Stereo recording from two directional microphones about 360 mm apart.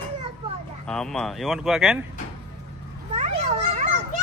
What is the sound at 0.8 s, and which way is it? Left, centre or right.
Speech, centre.